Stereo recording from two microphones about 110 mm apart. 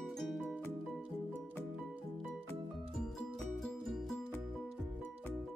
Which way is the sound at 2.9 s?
5° left (ahead or behind).